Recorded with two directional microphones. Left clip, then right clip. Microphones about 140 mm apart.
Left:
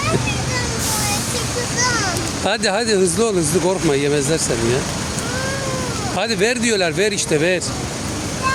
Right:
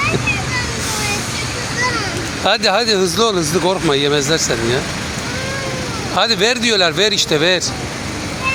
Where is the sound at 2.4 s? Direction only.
30° left (ahead or behind).